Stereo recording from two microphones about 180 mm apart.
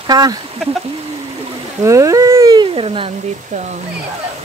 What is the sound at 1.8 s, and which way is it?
Speech, 15° right (ahead or behind).